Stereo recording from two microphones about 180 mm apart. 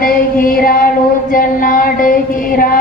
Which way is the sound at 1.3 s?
50° left (ahead or behind).